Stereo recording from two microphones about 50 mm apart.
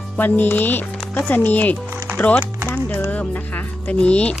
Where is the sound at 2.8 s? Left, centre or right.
Left.